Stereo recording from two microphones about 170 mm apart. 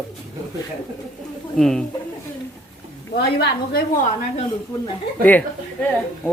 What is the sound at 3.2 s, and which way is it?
Speech, 75° left (ahead or behind).